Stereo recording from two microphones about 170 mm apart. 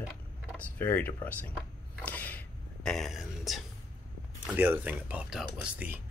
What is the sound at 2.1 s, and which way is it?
Whispering, 10° left (ahead or behind).